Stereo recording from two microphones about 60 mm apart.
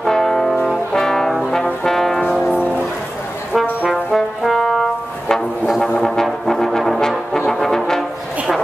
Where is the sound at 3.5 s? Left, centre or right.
Centre.